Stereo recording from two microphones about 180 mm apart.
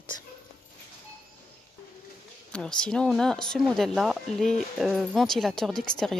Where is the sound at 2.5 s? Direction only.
5° left (ahead or behind).